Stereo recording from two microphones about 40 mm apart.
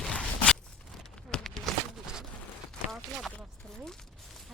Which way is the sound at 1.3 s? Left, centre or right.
Centre.